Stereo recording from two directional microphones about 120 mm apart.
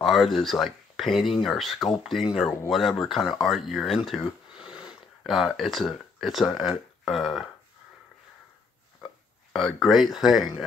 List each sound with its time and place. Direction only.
0.0 s speech: centre (ahead or behind)
9.5 s speech: centre (ahead or behind)